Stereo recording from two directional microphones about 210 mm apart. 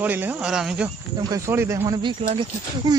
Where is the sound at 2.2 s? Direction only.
30° right (ahead or behind).